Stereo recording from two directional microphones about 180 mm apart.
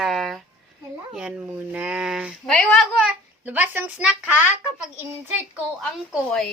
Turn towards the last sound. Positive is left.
turn(degrees=0)  # may be behind; listen again after turning